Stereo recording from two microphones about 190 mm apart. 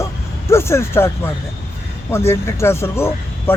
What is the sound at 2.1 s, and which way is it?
Speech, 15° left (ahead or behind).